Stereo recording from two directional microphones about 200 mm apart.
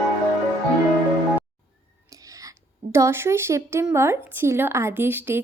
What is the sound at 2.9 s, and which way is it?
Speech, 10° right (ahead or behind).